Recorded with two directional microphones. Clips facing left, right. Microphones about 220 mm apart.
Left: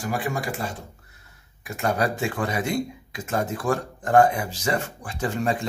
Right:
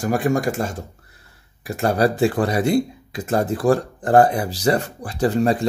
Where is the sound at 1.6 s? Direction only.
35° right (ahead or behind).